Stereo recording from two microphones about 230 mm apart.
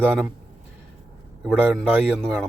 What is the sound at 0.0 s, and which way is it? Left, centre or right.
Speech, centre.